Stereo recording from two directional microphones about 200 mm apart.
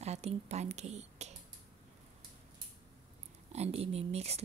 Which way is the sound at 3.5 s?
30° right (ahead or behind).